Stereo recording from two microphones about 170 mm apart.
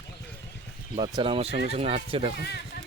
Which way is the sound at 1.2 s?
35° right (ahead or behind).